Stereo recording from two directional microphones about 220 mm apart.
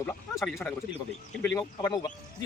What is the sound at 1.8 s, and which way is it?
Speech, 20° left (ahead or behind).